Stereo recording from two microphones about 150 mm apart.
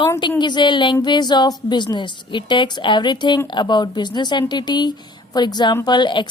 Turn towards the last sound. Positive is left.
turn(degrees=30)  # may be behind; listen again after turning